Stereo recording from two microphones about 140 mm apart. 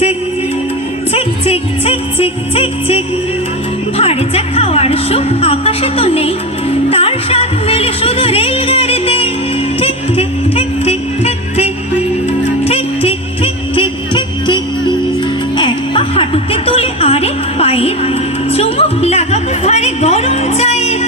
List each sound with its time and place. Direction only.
1.1 s music: 45° left (ahead or behind)
3.9 s speech: 45° left (ahead or behind)
9.8 s music: 45° left (ahead or behind)